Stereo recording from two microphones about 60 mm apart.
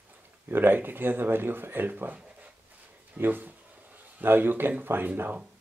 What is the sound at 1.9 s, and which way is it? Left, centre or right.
Speech, right.